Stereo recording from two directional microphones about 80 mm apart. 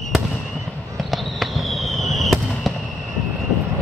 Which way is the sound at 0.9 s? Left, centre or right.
Centre.